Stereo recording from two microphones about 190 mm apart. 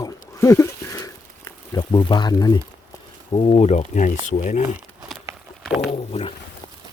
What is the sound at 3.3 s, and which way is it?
Speech, 30° left (ahead or behind).